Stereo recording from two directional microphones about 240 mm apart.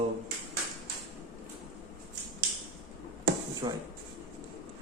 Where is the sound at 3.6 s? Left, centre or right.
Centre.